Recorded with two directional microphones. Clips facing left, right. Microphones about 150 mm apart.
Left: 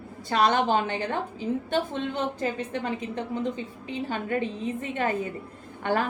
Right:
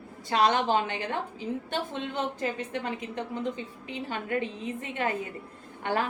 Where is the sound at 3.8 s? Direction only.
35° left (ahead or behind).